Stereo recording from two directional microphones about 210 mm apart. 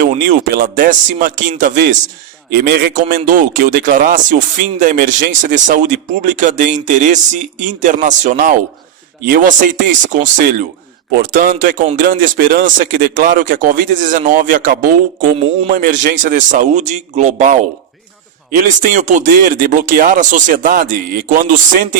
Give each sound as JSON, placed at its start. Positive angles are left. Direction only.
{"t": 0.0, "sound": "a man's voice", "side_deg": -40}